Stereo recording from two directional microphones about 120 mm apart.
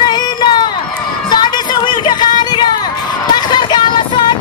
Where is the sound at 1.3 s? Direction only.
40° left (ahead or behind).